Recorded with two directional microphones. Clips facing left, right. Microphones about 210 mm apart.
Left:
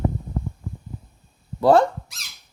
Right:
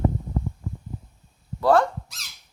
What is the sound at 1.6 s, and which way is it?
Speech, 25° left (ahead or behind).